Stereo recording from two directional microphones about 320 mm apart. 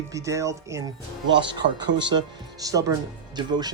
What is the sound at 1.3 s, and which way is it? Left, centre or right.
Speech, right.